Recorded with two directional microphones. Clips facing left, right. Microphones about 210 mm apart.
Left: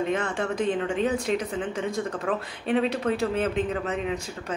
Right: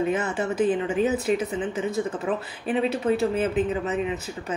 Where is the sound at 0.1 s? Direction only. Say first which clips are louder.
Right 1 dB; 5° right (ahead or behind).